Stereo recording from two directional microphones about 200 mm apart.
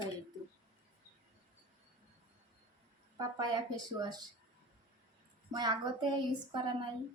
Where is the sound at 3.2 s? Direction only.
20° right (ahead or behind).